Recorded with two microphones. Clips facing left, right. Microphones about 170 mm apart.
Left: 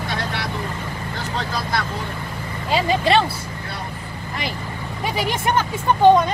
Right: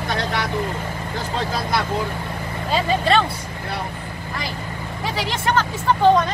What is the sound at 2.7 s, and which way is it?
Speech, 10° left (ahead or behind).